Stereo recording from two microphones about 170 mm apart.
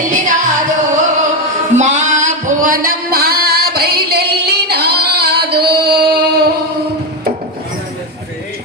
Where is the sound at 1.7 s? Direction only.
45° right (ahead or behind); by 6.6 s 70° right (ahead or behind).